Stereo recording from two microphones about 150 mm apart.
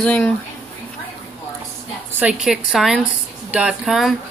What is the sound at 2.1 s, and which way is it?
Speech, 5° right (ahead or behind).